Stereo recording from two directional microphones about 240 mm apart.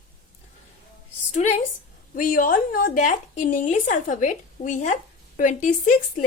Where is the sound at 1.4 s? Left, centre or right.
Left.